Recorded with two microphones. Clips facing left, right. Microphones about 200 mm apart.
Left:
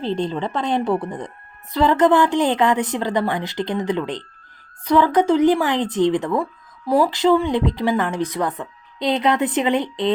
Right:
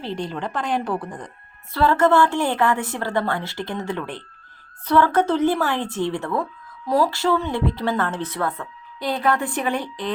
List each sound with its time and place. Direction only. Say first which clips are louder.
0.0 s speech: left 5 dB; 20° left (ahead or behind)